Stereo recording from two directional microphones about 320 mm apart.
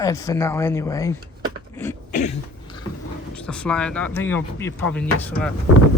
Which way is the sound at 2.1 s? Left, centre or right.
Left.